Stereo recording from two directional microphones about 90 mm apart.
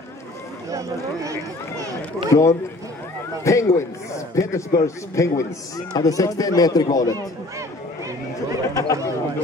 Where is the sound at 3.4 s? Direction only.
35° left (ahead or behind).